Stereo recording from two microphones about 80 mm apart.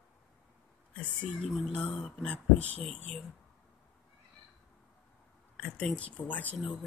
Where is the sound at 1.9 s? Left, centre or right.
Centre.